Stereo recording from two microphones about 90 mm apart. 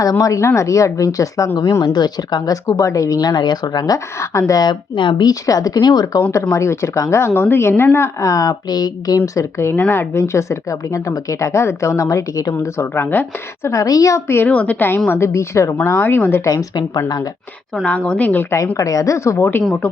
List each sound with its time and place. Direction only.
0.0 s a woman's voice: 40° left (ahead or behind); by 5.3 s 60° left (ahead or behind)
5.3 s a woman's voice: 40° left (ahead or behind)
6.5 s speech: 30° left (ahead or behind)
9.7 s speech: 20° left (ahead or behind); by 14.2 s 45° left (ahead or behind)
14.3 s a woman's voice: 25° left (ahead or behind)
16.5 s a woman's voice: 45° left (ahead or behind)
17.8 s speech: 15° left (ahead or behind)
18.8 s speech: 40° left (ahead or behind)